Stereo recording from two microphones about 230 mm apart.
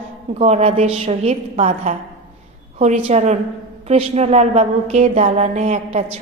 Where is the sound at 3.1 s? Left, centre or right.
Right.